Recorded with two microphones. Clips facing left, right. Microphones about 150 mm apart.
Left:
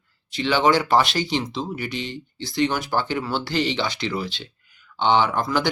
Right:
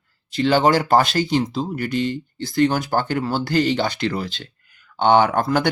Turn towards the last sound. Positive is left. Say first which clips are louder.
# right 4 dB
turn(degrees=-50)  # may be behind; listen again after turning